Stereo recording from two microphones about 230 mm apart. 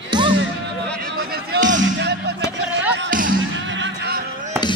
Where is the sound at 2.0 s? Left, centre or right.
Right.